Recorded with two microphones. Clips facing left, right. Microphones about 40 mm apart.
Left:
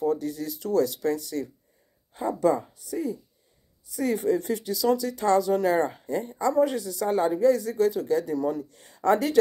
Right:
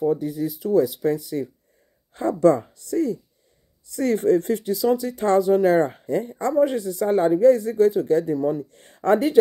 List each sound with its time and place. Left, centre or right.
0.0 s speech: right
2.1 s speech: right
3.8 s a man's voice: right
6.5 s a man's voice: right
8.6 s speech: right